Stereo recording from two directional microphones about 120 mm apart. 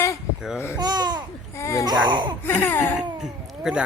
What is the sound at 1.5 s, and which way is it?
Babbling, 25° left (ahead or behind).